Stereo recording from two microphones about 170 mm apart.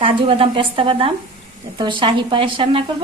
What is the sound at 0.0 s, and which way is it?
A woman's voice, 30° right (ahead or behind).